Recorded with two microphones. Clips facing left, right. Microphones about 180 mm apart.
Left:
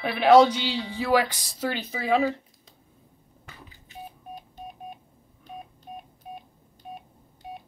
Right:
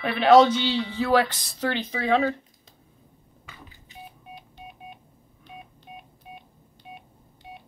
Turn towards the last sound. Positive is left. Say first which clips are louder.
# left 3 dB
turn(degrees=45)  # may be behind; listen again after turning